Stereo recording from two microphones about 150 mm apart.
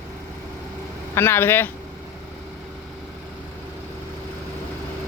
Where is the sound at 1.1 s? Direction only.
15° left (ahead or behind).